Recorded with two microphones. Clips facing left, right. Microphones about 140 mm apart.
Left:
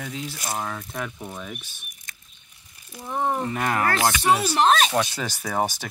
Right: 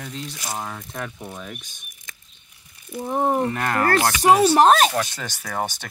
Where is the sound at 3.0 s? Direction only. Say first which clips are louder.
Right 4 dB; 35° right (ahead or behind).